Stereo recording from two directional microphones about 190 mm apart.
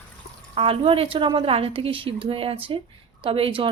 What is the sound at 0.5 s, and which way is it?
Speech, 30° right (ahead or behind).